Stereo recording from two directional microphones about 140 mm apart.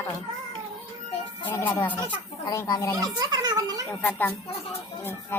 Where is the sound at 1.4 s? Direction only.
15° left (ahead or behind).